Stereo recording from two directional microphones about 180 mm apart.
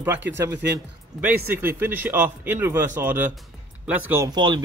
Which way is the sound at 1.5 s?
10° right (ahead or behind).